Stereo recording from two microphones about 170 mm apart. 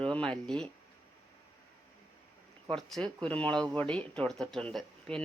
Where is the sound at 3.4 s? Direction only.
5° left (ahead or behind).